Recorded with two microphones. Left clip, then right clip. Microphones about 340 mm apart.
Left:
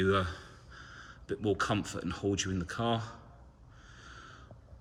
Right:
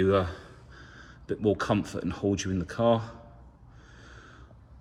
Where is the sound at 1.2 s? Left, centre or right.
Right.